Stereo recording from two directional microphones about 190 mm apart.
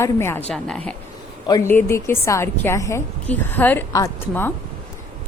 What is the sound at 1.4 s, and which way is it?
A woman's voice, 15° left (ahead or behind).